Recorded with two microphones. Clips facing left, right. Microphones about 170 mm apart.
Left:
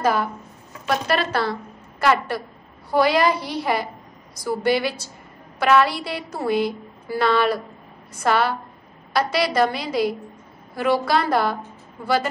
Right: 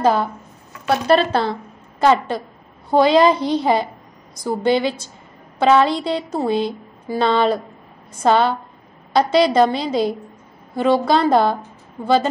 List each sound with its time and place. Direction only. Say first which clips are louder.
0.0 s a woman's voice: right 4 dB; 25° right (ahead or behind)